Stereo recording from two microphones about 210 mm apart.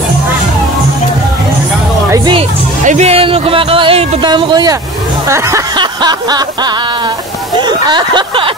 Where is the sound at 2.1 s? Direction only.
20° right (ahead or behind).